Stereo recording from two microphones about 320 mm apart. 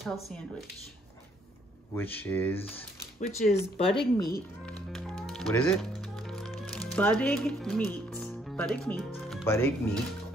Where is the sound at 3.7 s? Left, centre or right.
Centre.